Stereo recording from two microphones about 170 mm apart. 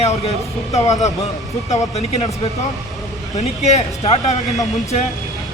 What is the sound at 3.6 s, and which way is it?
Speech, 40° left (ahead or behind).